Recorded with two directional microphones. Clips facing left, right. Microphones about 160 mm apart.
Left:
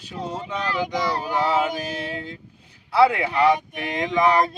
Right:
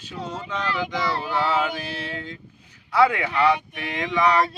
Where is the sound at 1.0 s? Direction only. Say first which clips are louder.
Even; 40° left (ahead or behind).